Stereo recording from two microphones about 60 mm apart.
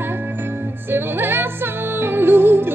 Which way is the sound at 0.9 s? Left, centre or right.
Right.